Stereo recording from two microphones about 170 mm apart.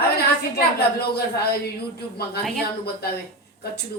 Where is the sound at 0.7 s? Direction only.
70° left (ahead or behind).